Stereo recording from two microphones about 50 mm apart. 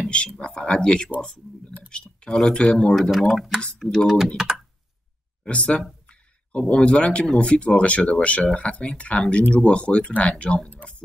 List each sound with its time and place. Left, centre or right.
0.0 s a sound: left
0.4 s speech: centre
3.2 s speech: centre
5.5 s speech: left